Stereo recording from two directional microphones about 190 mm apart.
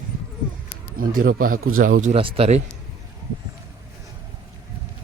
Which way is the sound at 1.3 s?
50° right (ahead or behind).